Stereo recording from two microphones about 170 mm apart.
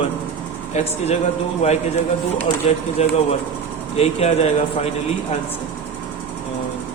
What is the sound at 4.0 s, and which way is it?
Speech, 35° left (ahead or behind).